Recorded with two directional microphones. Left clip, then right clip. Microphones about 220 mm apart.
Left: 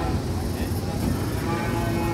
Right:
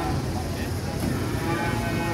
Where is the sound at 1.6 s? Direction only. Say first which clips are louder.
Even; 50° right (ahead or behind).